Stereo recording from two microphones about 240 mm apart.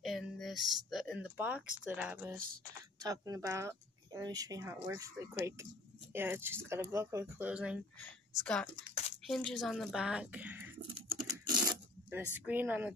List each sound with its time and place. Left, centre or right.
0.0 s speech: centre
2.3 s speech: right
3.0 s speech: centre
8.9 s a sound: left
9.3 s a woman's voice: centre
11.5 s coin: centre
12.4 s speech: centre